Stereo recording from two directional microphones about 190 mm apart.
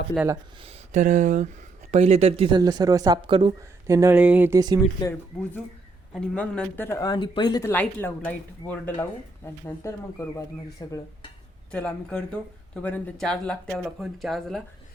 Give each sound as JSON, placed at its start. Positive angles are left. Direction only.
{"t": 0.6, "sound": "speech", "side_deg": -35}
{"t": 2.6, "sound": "speech", "side_deg": -20}
{"t": 3.8, "sound": "speech", "side_deg": -15}
{"t": 5.3, "sound": "speech", "side_deg": 5}
{"t": 7.7, "sound": "speech", "side_deg": 10}
{"t": 11.7, "sound": "speech", "side_deg": 5}